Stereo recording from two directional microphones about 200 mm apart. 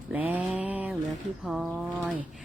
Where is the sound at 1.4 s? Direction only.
5° right (ahead or behind).